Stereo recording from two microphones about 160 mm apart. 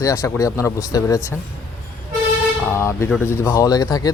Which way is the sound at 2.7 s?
15° left (ahead or behind).